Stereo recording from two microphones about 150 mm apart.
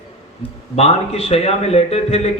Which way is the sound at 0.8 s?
40° left (ahead or behind).